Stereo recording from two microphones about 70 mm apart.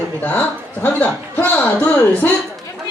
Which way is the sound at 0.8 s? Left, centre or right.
Left.